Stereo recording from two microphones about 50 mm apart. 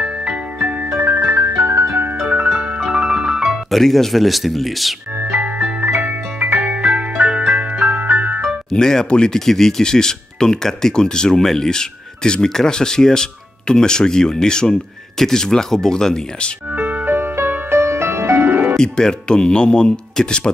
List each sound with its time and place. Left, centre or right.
0.0 s music: centre
0.9 s music: right
2.2 s music: right
2.5 s music: centre
3.7 s speech: centre
5.2 s music: right
5.9 s music: right
6.6 s music: right
7.8 s music: right
8.6 s speech: centre
16.7 s music: right
17.7 s music: right
18.0 s music: right
18.8 s speech: centre